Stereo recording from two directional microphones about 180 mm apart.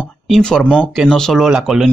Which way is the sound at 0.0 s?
5° left (ahead or behind).